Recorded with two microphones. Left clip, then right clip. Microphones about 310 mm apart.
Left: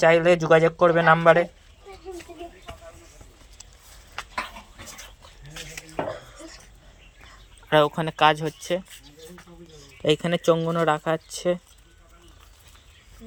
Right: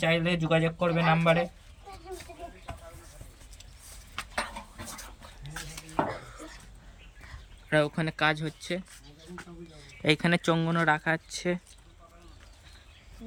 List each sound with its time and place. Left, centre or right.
0.1 s speech: left
7.7 s speech: centre
10.0 s speech: centre